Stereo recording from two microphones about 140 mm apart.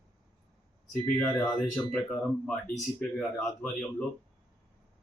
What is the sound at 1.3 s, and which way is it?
Speech, 30° left (ahead or behind).